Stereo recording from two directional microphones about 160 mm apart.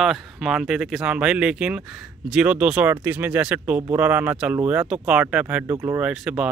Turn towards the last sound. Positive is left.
turn(degrees=-5)  # may be behind; listen again after turning